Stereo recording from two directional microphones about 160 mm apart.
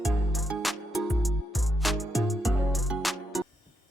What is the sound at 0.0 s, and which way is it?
Music, centre (ahead or behind).